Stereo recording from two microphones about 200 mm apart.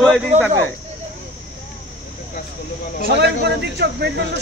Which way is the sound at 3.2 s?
55° right (ahead or behind).